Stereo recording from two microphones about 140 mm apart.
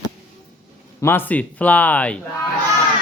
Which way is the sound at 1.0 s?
15° left (ahead or behind).